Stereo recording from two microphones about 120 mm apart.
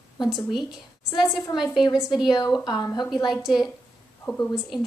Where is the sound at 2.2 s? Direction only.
35° left (ahead or behind).